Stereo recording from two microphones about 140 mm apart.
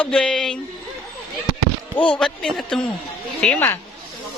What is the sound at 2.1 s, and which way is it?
A man's voice, 5° left (ahead or behind).